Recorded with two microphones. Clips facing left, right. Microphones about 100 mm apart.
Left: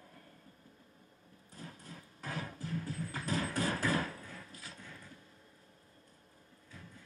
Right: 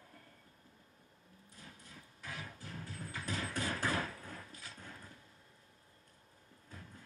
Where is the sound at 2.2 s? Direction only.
40° left (ahead or behind).